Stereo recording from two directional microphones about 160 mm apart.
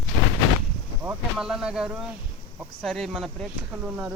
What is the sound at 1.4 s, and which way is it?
Speech, 5° right (ahead or behind).